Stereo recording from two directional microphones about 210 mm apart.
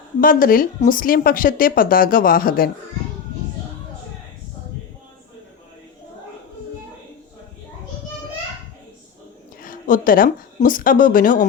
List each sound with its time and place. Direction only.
0.2 s speech: 40° left (ahead or behind)
9.6 s speech: 40° left (ahead or behind)